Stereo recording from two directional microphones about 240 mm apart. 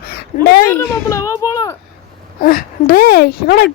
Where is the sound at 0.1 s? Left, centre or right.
Left.